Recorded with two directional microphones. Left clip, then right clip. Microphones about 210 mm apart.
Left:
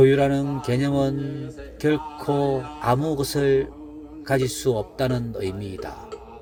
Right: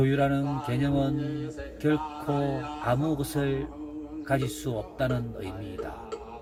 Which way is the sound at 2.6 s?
45° left (ahead or behind).